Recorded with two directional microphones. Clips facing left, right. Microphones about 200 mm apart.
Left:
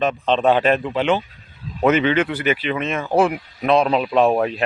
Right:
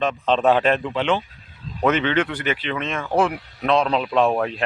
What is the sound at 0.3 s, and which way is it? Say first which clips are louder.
Speech: left 1 dB; centre (ahead or behind).